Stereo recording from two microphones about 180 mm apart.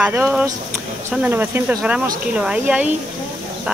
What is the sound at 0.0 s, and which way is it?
Speech, 10° right (ahead or behind).